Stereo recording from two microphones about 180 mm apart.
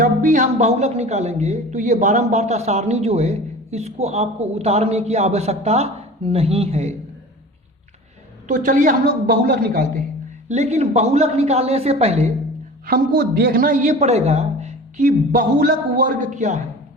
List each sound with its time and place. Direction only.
0.0 s speech: 45° right (ahead or behind)
8.4 s a man's voice: 45° right (ahead or behind)
10.5 s speech: 40° right (ahead or behind)
12.9 s a man's voice: 60° right (ahead or behind); by 16.6 s 40° right (ahead or behind)